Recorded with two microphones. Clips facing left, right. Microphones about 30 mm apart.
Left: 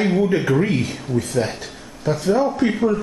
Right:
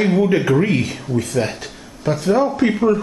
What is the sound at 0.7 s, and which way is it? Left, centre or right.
Speech, centre.